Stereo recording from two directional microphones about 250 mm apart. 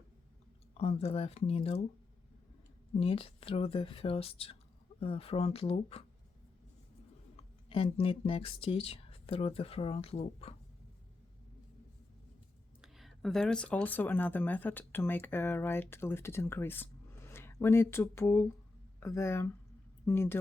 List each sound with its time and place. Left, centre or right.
0.7 s speech: left
3.0 s speech: left
7.3 s speech: left
12.8 s speech: centre